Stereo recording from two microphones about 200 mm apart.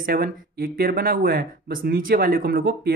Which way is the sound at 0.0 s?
45° right (ahead or behind).